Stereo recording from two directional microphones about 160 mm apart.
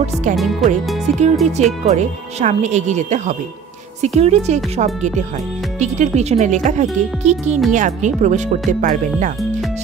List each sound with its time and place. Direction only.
0.0 s speech: 50° right (ahead or behind)
0.4 s speech: centre (ahead or behind)
1.4 s speech: 45° right (ahead or behind)